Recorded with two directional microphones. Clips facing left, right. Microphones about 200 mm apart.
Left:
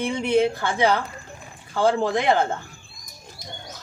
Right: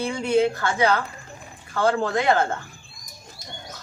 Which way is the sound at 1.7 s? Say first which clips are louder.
Left 1 dB; 15° left (ahead or behind).